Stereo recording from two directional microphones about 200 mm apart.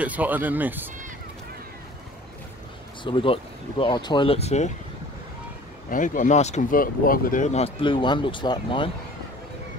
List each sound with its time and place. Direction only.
0.0 s speech: 10° right (ahead or behind)
3.0 s speech: 25° left (ahead or behind)
5.9 s speech: 40° left (ahead or behind); by 8.9 s 25° left (ahead or behind)